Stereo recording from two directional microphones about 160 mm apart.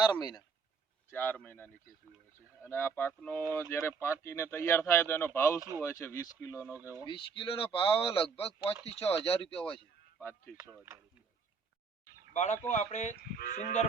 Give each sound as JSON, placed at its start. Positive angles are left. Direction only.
{"t": 0.0, "sound": "speech", "side_deg": 25}
{"t": 1.1, "sound": "speech", "side_deg": 10}
{"t": 5.5, "sound": "speech", "side_deg": -20}
{"t": 5.8, "sound": "speech", "side_deg": 15}
{"t": 7.0, "sound": "speech", "side_deg": 30}
{"t": 10.2, "sound": "speech", "side_deg": 15}
{"t": 12.3, "sound": "speech", "side_deg": 50}